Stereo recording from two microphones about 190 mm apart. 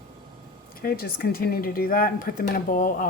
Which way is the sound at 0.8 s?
50° left (ahead or behind).